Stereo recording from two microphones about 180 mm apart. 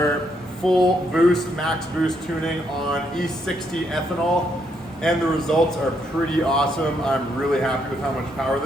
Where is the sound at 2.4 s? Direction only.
5° left (ahead or behind).